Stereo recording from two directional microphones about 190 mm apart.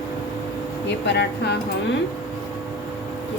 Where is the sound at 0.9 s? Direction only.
65° left (ahead or behind).